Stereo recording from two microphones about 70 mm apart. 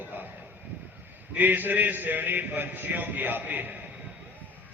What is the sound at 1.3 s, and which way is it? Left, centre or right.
A man's voice, right.